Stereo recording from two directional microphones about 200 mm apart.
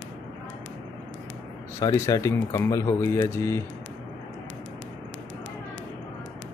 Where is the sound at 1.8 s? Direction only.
20° left (ahead or behind).